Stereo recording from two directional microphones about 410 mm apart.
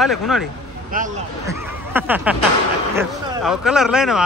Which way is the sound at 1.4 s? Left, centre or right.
Centre.